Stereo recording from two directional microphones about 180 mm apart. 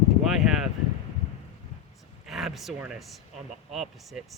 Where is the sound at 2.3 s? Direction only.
Centre (ahead or behind).